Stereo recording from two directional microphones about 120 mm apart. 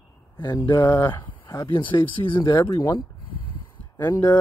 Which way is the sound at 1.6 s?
45° left (ahead or behind).